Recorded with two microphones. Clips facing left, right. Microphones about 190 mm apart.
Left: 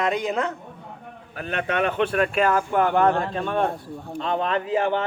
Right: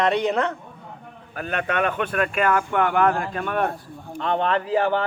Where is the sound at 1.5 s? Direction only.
35° left (ahead or behind).